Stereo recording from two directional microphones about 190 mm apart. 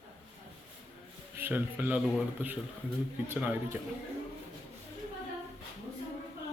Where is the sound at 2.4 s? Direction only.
10° right (ahead or behind).